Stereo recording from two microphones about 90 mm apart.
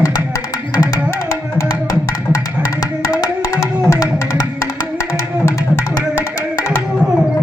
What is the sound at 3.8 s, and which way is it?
Music, 35° left (ahead or behind).